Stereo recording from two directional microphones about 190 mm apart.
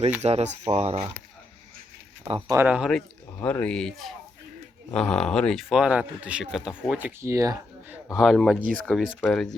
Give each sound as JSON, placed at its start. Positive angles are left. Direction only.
{"t": 0.2, "sound": "speech", "side_deg": -35}
{"t": 2.5, "sound": "speech", "side_deg": -10}
{"t": 3.4, "sound": "speech", "side_deg": 5}
{"t": 8.1, "sound": "speech", "side_deg": 0}